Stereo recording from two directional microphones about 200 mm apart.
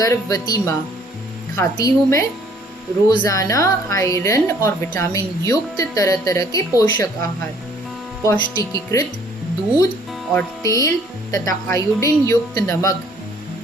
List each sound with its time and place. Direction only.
0.0 s a woman's voice: 15° left (ahead or behind)
10.3 s a woman's voice: 15° left (ahead or behind)